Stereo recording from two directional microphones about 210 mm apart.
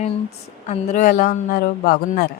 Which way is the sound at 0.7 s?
35° left (ahead or behind).